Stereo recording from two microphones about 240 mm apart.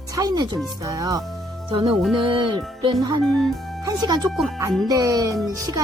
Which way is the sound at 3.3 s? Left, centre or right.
Centre.